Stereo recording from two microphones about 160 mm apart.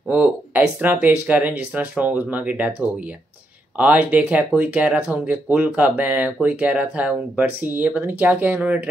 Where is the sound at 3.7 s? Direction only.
10° right (ahead or behind).